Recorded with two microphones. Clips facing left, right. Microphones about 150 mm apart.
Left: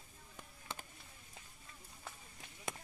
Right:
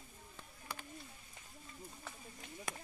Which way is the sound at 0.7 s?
25° left (ahead or behind).